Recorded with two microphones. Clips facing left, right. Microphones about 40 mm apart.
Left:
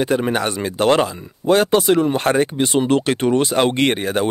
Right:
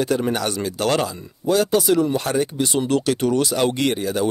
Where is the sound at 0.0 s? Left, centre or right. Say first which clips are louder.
Left 2 dB; left.